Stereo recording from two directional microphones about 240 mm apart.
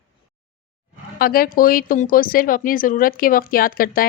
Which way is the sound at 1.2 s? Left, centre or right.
Left.